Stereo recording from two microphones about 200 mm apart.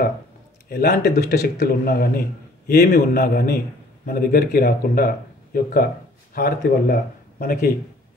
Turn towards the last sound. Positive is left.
turn(degrees=45)  # may be behind; listen again after turning